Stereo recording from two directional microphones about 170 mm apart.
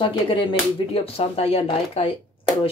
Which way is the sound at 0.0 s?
30° left (ahead or behind).